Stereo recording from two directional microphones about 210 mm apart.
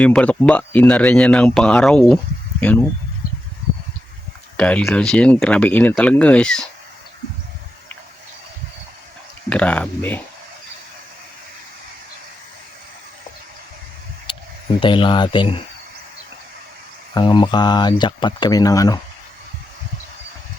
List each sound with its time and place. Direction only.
0.0 s speech: 5° left (ahead or behind)
4.5 s speech: 5° left (ahead or behind)
9.5 s speech: 5° left (ahead or behind)
14.3 s a sound: 25° left (ahead or behind)
14.8 s speech: 25° left (ahead or behind)
17.2 s speech: 20° left (ahead or behind)